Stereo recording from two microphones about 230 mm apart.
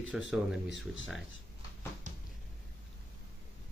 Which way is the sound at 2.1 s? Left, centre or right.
Right.